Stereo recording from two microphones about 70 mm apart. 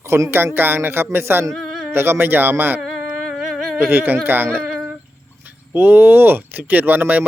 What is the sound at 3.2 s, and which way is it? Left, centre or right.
Humming, centre.